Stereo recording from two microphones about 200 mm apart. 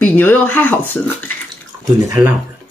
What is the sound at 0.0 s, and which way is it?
Speech, 10° left (ahead or behind).